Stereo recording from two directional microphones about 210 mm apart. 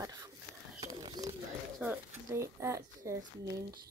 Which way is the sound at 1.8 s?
10° right (ahead or behind).